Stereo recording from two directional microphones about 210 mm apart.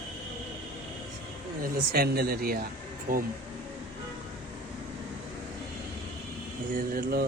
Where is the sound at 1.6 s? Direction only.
45° right (ahead or behind).